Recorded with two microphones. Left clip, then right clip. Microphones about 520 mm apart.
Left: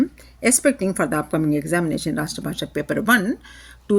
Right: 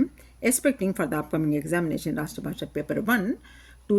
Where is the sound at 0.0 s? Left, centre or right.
Right.